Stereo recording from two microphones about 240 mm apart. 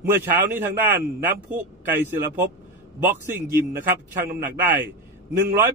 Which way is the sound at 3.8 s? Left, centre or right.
Right.